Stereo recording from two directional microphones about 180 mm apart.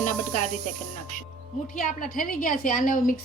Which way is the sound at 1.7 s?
45° left (ahead or behind).